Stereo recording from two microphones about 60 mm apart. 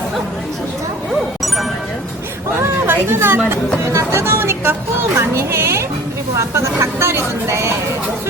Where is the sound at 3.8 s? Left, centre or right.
Right.